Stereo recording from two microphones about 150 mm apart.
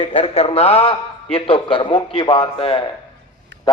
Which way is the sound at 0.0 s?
40° left (ahead or behind).